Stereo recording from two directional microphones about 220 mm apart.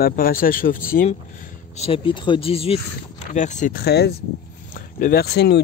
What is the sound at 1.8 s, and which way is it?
Speech, 25° left (ahead or behind).